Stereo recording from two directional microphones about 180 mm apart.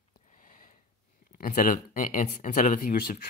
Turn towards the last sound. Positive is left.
turn(degrees=45)  # may be behind; listen again after turning